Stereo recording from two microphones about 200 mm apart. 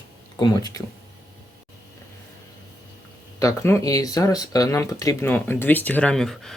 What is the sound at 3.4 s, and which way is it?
Speech, 15° left (ahead or behind).